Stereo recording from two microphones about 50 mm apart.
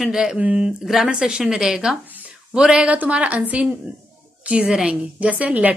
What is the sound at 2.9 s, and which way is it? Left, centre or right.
A woman's voice, right.